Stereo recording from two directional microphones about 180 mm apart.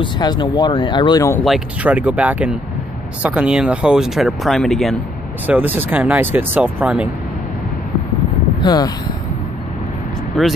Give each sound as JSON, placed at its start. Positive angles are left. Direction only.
{"t": 0.0, "sound": "speech", "side_deg": 25}
{"t": 1.4, "sound": "speech", "side_deg": -5}
{"t": 5.5, "sound": "speech", "side_deg": -10}
{"t": 8.6, "sound": "speech", "side_deg": 20}
{"t": 10.4, "sound": "speech", "side_deg": 0}